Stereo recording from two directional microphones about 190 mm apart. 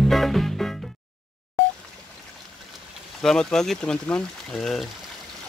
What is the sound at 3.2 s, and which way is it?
Speech, 5° left (ahead or behind).